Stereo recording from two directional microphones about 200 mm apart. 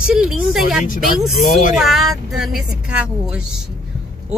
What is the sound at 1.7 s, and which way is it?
Speech, centre (ahead or behind).